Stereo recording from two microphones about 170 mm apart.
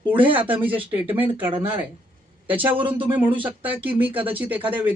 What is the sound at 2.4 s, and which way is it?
A man's voice, 10° right (ahead or behind).